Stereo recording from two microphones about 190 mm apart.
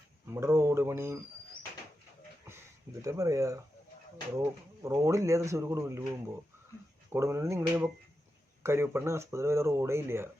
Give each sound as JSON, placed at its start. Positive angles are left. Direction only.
{"t": 0.3, "sound": "speech", "side_deg": -15}
{"t": 3.0, "sound": "speech", "side_deg": -15}
{"t": 7.1, "sound": "speech", "side_deg": -15}